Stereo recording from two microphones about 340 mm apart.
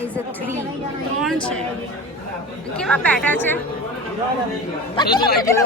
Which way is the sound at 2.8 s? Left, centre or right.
Centre.